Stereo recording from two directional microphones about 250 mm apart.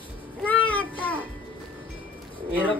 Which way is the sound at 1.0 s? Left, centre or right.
Centre.